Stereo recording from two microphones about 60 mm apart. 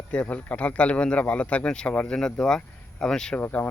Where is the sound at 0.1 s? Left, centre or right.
Left.